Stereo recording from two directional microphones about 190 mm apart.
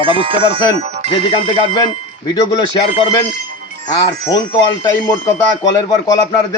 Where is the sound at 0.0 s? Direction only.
30° right (ahead or behind).